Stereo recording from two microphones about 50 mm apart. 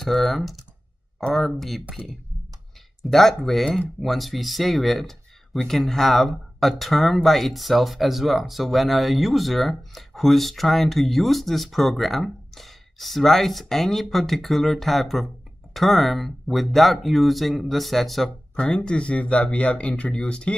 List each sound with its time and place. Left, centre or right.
0.0 s speech: centre
3.0 s speech: centre
18.6 s speech: centre